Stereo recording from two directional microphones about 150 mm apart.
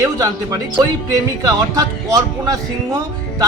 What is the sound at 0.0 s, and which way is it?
Speech, 25° right (ahead or behind).